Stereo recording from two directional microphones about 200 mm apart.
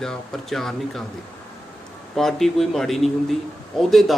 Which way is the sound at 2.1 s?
Centre (ahead or behind).